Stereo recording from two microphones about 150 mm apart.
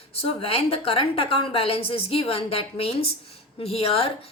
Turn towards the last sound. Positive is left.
turn(degrees=40)  # may be behind; listen again after turning